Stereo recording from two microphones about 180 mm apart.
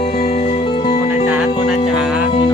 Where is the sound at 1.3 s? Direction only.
5° right (ahead or behind).